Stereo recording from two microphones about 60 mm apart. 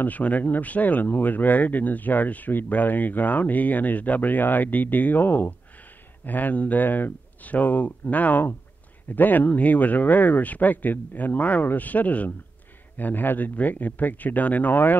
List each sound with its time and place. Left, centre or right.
0.0 s speech: left